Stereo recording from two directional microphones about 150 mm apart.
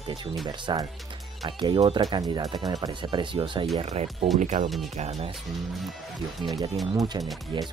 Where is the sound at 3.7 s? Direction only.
45° right (ahead or behind).